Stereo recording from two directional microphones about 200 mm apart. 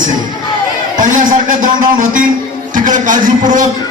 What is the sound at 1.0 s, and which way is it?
A man's voice, 40° right (ahead or behind).